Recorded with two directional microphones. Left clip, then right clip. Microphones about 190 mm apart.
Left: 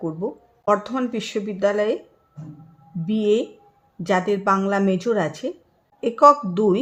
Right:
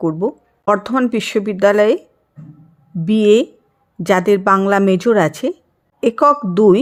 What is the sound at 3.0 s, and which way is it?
A woman's voice, 35° right (ahead or behind).